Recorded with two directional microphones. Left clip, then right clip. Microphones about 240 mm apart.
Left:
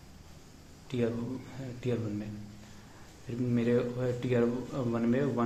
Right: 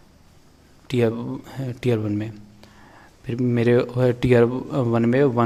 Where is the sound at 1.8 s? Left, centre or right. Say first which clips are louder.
Right 12 dB; right.